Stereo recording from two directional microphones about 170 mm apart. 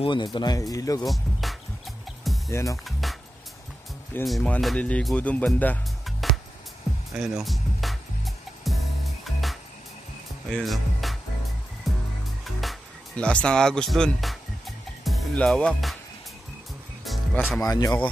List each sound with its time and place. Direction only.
0.0 s speech: 25° left (ahead or behind)
1.0 s speech: centre (ahead or behind)
2.2 s music: centre (ahead or behind)
2.5 s speech: 20° left (ahead or behind)
2.8 s music: centre (ahead or behind)
4.2 s speech: 5° left (ahead or behind)
8.6 s music: centre (ahead or behind)
10.5 s speech: centre (ahead or behind)
11.9 s music: centre (ahead or behind)
15.0 s speech: centre (ahead or behind)
17.0 s music: centre (ahead or behind)
17.6 s speech: 20° left (ahead or behind)